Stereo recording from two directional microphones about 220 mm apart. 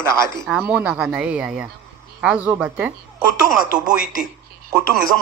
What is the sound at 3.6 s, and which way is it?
Speech, 40° left (ahead or behind).